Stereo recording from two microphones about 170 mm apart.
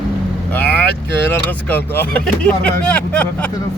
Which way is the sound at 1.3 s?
10° left (ahead or behind).